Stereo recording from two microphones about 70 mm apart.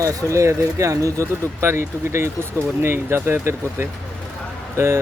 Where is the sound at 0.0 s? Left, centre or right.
Right.